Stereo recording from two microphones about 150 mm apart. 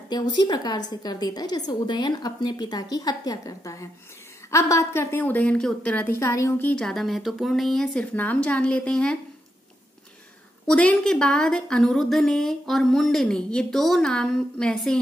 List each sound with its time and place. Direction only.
0.1 s a woman's voice: 30° left (ahead or behind)
6.7 s a woman's voice: 5° left (ahead or behind)
10.7 s a woman's voice: 5° left (ahead or behind)